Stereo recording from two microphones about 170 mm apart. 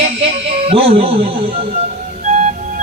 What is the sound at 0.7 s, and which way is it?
Speech, 35° right (ahead or behind).